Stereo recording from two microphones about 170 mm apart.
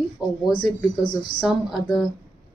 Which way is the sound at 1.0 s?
25° left (ahead or behind).